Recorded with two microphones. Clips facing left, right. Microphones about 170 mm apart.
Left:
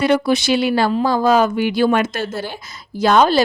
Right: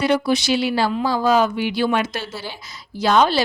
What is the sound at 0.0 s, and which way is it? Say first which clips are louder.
Speech: left 3 dB; 55° left (ahead or behind).